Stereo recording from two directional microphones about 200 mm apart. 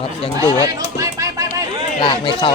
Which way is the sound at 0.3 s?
15° right (ahead or behind).